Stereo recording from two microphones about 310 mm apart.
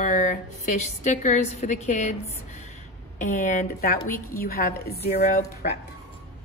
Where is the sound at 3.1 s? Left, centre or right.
Left.